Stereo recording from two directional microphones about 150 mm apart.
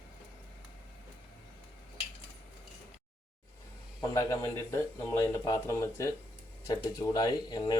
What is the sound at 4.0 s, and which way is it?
A man's voice, 20° left (ahead or behind).